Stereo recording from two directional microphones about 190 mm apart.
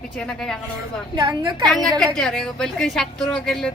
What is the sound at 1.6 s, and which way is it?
Speech, centre (ahead or behind).